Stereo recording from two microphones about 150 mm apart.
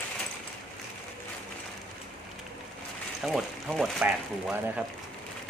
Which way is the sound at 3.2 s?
Centre (ahead or behind).